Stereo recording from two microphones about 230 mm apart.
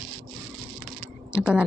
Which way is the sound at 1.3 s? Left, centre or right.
Centre.